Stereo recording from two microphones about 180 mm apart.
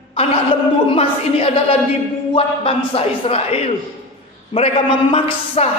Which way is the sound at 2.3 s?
30° left (ahead or behind).